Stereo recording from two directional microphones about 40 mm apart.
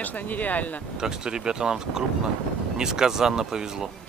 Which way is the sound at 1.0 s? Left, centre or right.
Centre.